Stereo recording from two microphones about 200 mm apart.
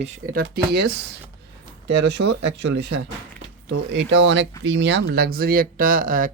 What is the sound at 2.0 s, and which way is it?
Speech, 60° right (ahead or behind).